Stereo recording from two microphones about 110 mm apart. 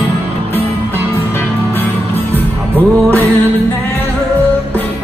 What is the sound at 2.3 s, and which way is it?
Music, 15° left (ahead or behind).